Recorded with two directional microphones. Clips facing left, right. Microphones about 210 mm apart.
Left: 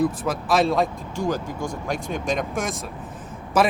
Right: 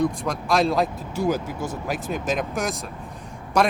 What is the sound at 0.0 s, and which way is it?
Speech, 5° left (ahead or behind).